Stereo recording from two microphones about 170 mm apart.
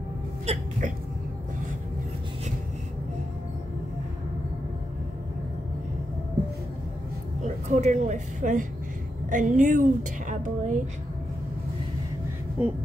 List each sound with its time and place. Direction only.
0.5 s speech: 45° right (ahead or behind)
7.4 s a woman's voice: 40° right (ahead or behind)
12.6 s a sound: 10° right (ahead or behind)